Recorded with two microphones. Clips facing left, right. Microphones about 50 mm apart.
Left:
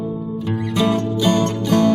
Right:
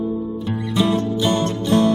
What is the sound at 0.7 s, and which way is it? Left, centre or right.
Music, left.